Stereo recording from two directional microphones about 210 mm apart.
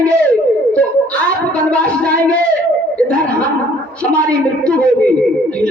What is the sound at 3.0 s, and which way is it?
Chuckle, 5° left (ahead or behind).